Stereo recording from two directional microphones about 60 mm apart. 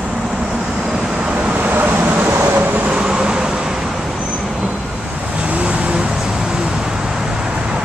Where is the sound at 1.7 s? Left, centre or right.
Right.